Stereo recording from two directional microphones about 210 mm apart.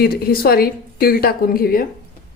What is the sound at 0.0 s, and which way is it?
A woman's voice, 45° left (ahead or behind).